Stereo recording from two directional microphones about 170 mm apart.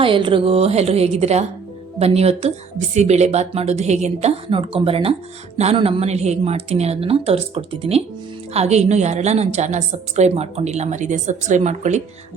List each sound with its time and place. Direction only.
0.0 s a woman's voice: 30° right (ahead or behind)